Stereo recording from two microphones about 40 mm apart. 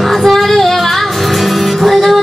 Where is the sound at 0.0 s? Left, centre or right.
Centre.